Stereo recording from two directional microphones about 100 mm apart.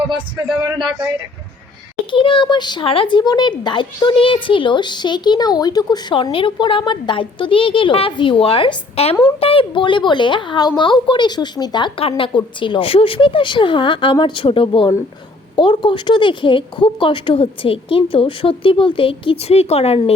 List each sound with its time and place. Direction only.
2.0 s speech: 60° left (ahead or behind)
2.8 s speech: 60° left (ahead or behind); by 6.1 s 40° left (ahead or behind)
6.3 s speech: 60° left (ahead or behind); by 9.1 s 75° left (ahead or behind)
9.4 s speech: 65° left (ahead or behind); by 11.9 s 45° left (ahead or behind)
11.9 s speech: 65° left (ahead or behind); by 20.1 s 90° left